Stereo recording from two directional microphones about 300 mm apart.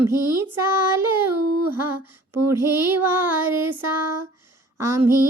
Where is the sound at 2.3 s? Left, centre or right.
Centre.